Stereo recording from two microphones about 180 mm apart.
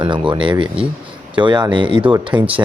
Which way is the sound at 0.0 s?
25° right (ahead or behind).